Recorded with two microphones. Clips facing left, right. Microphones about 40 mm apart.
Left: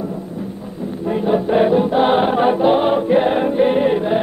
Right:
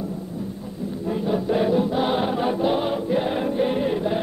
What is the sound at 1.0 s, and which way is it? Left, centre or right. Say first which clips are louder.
Choir: left 6 dB; left.